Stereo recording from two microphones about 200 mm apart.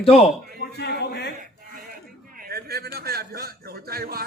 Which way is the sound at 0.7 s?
55° left (ahead or behind).